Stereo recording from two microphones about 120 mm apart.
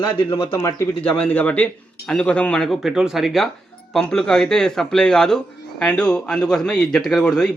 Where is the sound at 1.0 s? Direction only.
10° left (ahead or behind).